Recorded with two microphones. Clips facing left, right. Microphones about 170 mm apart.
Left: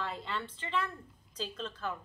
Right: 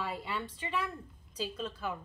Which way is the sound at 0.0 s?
10° right (ahead or behind).